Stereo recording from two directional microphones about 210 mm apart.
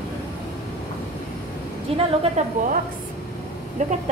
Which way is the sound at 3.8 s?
35° right (ahead or behind).